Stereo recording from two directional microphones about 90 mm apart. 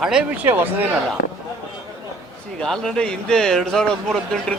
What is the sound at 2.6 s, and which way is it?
Speech, 5° left (ahead or behind).